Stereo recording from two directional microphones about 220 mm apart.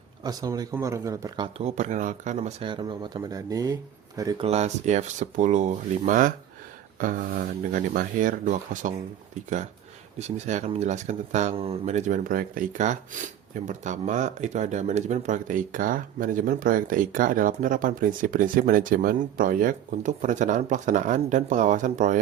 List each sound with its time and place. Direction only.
0.2 s speech: 15° right (ahead or behind)
4.4 s speech: 30° right (ahead or behind)
10.2 s speech: 30° right (ahead or behind)